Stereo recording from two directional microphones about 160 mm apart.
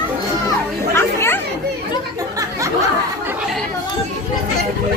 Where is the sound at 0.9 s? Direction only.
15° left (ahead or behind).